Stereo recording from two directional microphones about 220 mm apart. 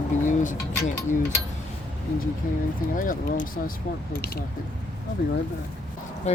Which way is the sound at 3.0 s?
40° left (ahead or behind).